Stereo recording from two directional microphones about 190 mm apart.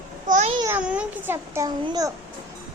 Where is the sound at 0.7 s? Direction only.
5° right (ahead or behind).